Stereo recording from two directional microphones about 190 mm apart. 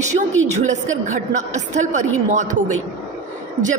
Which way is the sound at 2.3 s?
40° right (ahead or behind).